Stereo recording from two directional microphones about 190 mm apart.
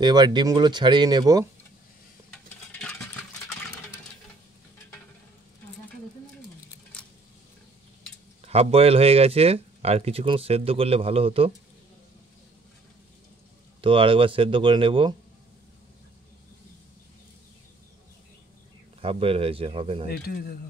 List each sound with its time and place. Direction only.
0.0 s speech: 20° right (ahead or behind)
8.4 s speech: 35° right (ahead or behind)
13.7 s speech: 25° right (ahead or behind)
18.9 s speech: 30° right (ahead or behind)
20.1 s speech: 55° left (ahead or behind)